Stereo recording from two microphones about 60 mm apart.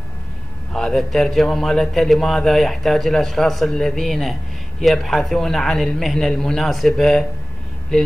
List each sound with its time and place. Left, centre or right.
0.7 s a man's voice: centre